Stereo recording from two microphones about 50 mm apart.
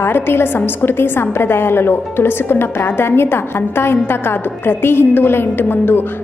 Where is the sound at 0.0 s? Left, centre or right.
Left.